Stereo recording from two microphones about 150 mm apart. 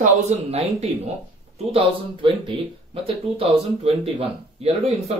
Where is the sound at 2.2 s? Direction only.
35° right (ahead or behind).